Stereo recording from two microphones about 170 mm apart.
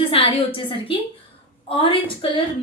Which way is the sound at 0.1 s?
35° left (ahead or behind).